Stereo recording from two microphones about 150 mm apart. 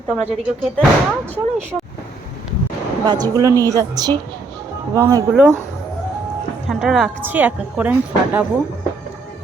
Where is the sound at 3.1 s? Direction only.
25° right (ahead or behind).